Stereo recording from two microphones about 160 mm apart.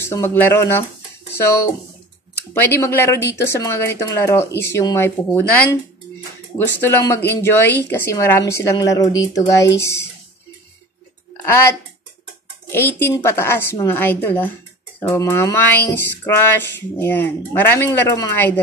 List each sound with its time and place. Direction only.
0.0 s speech: 15° left (ahead or behind)
2.8 s speech: 15° left (ahead or behind)
6.8 s speech: 20° left (ahead or behind)
11.4 s speech: 15° left (ahead or behind)